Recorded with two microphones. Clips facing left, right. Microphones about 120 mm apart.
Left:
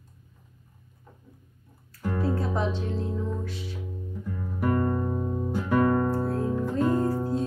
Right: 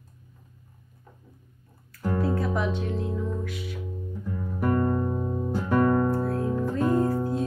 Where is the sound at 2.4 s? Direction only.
30° left (ahead or behind).